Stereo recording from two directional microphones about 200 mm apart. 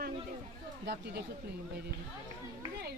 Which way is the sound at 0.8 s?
55° right (ahead or behind).